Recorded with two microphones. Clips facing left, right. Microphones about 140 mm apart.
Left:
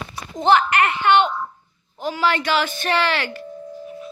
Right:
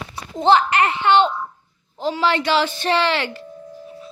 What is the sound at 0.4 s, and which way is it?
A woman's voice, 30° right (ahead or behind).